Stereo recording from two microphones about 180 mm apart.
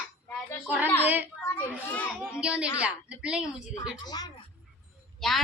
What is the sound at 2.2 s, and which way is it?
A child's voice, 5° right (ahead or behind).